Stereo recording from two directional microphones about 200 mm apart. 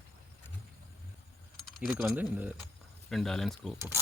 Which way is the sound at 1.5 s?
Centre (ahead or behind).